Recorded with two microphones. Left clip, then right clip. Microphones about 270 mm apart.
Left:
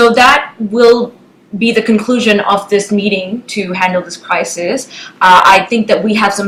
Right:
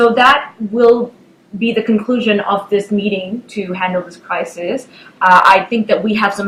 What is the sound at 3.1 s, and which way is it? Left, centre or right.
Speech, right.